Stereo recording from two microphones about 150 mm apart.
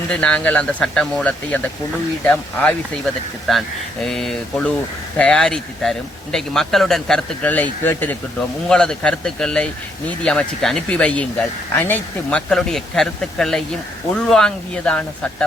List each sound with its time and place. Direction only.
0.1 s speech: 5° left (ahead or behind)